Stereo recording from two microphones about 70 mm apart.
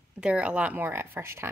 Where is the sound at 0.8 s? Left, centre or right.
Right.